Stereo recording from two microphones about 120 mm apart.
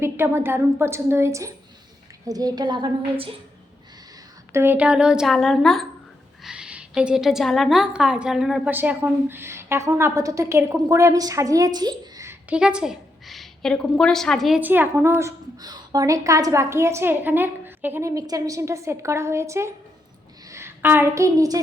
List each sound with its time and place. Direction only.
0.0 s a woman's voice: 20° right (ahead or behind); by 3.3 s 45° right (ahead or behind)
4.5 s a woman's voice: 20° right (ahead or behind)
8.7 s a woman's voice: 15° right (ahead or behind)
12.5 s a sound: 10° right (ahead or behind)
14.0 s a woman's voice: 5° left (ahead or behind)
14.6 s speech: 15° right (ahead or behind)
15.5 s a woman's voice: 35° right (ahead or behind)
18.1 s a woman's voice: 30° right (ahead or behind)